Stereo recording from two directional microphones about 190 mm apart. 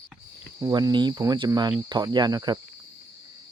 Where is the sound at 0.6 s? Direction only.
15° right (ahead or behind).